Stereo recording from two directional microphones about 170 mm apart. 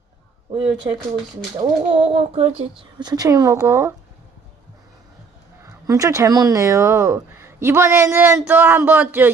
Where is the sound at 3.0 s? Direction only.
25° right (ahead or behind).